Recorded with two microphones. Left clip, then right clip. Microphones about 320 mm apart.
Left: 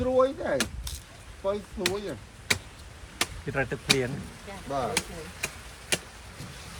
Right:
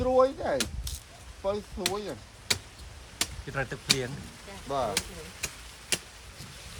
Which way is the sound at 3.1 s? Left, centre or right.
Centre.